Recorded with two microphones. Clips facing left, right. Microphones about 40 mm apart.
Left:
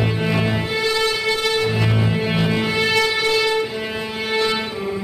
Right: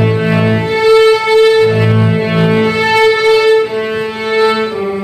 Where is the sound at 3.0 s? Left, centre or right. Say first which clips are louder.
Right 10 dB; right.